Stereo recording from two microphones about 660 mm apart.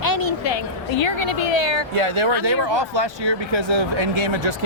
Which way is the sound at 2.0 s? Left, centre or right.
Right.